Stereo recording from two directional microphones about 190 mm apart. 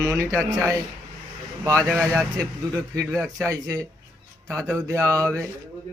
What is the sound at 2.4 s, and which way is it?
Speech, 15° right (ahead or behind).